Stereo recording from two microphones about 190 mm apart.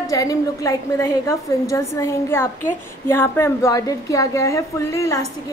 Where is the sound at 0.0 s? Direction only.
20° left (ahead or behind).